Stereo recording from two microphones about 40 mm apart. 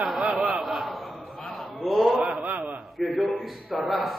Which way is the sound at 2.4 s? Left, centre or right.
Right.